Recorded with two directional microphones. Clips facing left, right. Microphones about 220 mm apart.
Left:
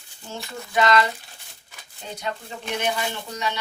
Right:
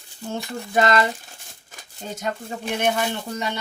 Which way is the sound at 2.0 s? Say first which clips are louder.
Right 3 dB; 45° right (ahead or behind).